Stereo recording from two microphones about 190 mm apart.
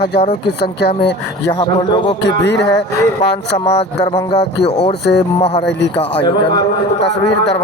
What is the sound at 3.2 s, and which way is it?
Speech, 30° left (ahead or behind).